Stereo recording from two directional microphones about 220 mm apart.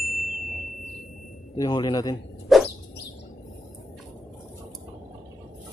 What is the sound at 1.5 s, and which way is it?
Speech, 20° left (ahead or behind).